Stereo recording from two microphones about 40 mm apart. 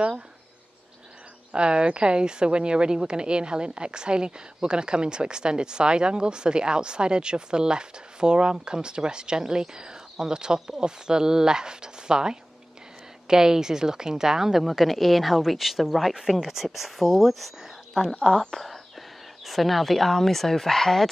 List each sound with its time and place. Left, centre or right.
1.5 s a woman's voice: right; by 21.1 s centre